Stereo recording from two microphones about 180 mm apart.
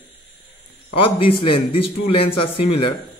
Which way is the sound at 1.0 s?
30° left (ahead or behind).